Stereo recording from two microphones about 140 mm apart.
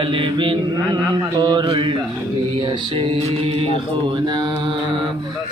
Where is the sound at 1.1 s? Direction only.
30° right (ahead or behind).